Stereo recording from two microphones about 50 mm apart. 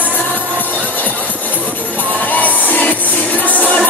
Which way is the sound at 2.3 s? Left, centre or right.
Left.